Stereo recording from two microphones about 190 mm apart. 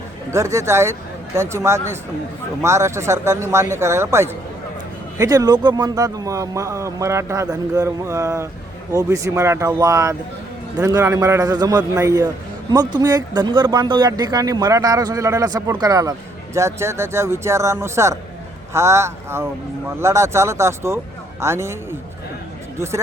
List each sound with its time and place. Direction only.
0.3 s speech: 15° right (ahead or behind)